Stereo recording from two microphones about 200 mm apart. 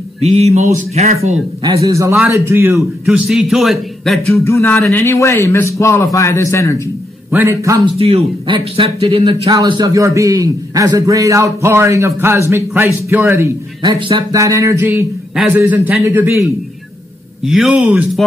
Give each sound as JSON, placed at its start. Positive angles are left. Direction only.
{"t": 0.2, "sound": "speech", "side_deg": -30}
{"t": 1.6, "sound": "a man's voice", "side_deg": -15}
{"t": 4.5, "sound": "a man's voice", "side_deg": 15}
{"t": 7.2, "sound": "speech", "side_deg": -10}
{"t": 8.0, "sound": "speech", "side_deg": -30}
{"t": 13.9, "sound": "speech", "side_deg": -25}
{"t": 17.5, "sound": "a man's voice", "side_deg": -5}